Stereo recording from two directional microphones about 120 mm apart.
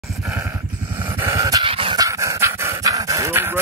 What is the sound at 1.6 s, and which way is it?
Dog, 45° right (ahead or behind).